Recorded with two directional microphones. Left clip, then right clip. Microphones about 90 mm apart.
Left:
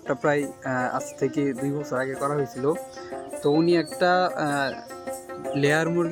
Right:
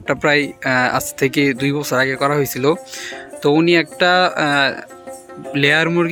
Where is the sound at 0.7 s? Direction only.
90° right.